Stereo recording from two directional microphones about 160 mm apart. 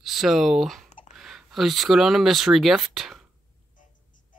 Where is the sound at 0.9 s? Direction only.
45° left (ahead or behind).